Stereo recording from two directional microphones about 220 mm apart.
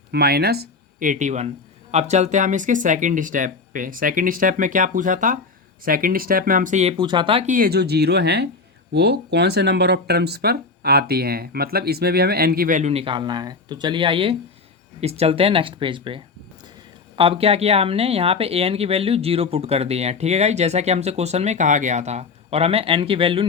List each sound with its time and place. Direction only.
0.1 s speech: 45° right (ahead or behind); by 7.5 s 25° right (ahead or behind)
7.5 s speech: 45° right (ahead or behind); by 23.5 s 25° right (ahead or behind)